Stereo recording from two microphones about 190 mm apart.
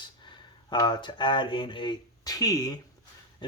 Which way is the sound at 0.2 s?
25° left (ahead or behind).